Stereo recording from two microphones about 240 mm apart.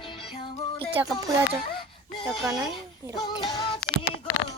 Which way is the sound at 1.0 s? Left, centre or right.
Centre.